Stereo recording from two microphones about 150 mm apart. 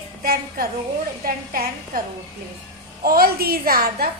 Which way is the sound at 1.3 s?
75° right (ahead or behind).